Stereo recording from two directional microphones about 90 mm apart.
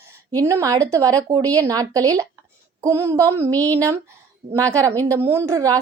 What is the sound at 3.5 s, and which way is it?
Speech, 20° left (ahead or behind).